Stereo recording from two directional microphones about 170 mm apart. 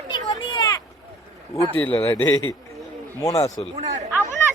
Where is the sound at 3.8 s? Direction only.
45° right (ahead or behind).